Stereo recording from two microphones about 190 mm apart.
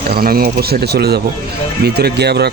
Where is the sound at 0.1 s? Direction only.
50° right (ahead or behind).